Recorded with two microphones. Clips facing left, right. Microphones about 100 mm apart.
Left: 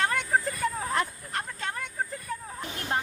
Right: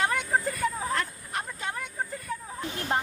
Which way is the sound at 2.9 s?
20° right (ahead or behind).